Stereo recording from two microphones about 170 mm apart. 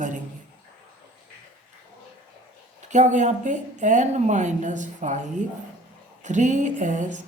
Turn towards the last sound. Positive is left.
turn(degrees=-45)  # may be behind; listen again after turning